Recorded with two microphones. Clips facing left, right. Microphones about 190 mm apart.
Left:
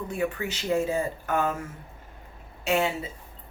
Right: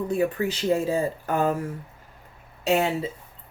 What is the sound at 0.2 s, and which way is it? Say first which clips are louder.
Speech: right 5 dB; 35° right (ahead or behind).